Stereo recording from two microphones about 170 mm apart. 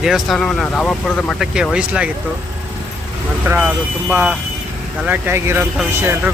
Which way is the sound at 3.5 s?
10° right (ahead or behind).